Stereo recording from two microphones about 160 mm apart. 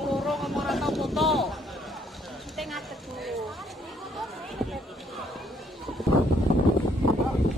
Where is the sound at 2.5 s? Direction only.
Centre (ahead or behind).